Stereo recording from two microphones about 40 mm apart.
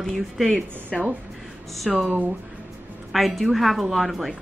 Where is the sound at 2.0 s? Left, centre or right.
Right.